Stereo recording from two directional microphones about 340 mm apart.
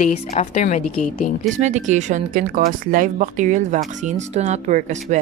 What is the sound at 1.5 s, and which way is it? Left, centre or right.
Speech, right.